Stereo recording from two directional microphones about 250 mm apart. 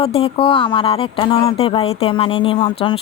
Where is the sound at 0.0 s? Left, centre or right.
Left.